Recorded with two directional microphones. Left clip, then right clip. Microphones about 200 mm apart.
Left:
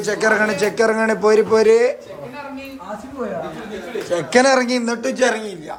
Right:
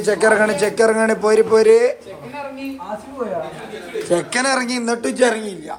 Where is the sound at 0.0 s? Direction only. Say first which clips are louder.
Right 2 dB; 5° left (ahead or behind).